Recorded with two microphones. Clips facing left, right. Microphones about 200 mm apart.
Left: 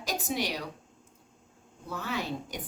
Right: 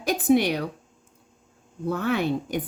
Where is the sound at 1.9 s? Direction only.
60° right (ahead or behind).